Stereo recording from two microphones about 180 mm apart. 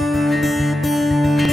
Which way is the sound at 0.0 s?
Centre (ahead or behind).